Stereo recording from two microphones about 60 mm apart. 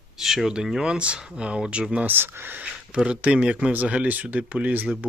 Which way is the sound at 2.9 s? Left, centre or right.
Centre.